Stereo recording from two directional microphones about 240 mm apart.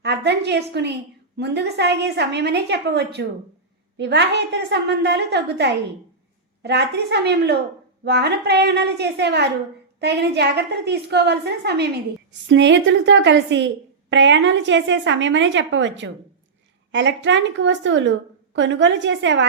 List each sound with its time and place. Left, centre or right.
0.0 s a woman's voice: right